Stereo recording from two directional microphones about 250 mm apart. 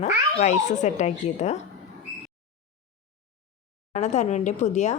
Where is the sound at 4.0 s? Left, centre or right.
Left.